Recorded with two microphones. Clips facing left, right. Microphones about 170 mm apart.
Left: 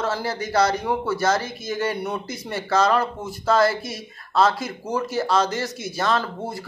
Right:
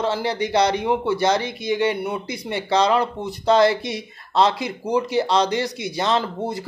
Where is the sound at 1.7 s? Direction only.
10° right (ahead or behind).